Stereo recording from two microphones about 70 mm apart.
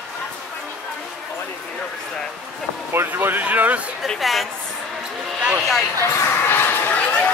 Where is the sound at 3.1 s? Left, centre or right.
Right.